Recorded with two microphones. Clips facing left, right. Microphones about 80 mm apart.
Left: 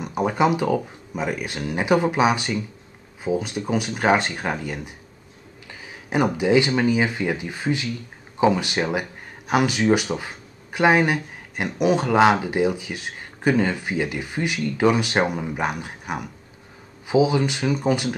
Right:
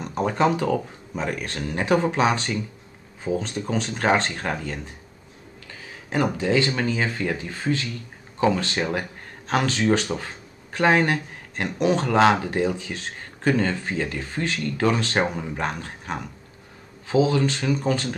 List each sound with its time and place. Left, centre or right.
0.0 s speech: centre